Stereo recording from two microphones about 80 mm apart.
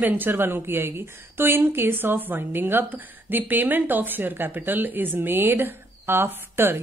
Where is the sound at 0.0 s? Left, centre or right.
Right.